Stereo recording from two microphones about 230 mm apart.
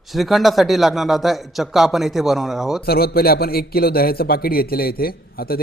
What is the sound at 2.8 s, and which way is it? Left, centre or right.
Speech, left.